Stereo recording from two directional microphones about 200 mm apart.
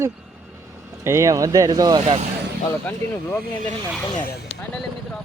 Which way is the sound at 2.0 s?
35° right (ahead or behind).